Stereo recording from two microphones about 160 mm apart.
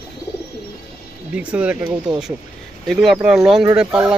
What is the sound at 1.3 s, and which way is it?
Speech, 10° right (ahead or behind).